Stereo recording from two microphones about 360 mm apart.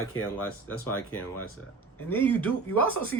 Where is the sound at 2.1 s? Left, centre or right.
Centre.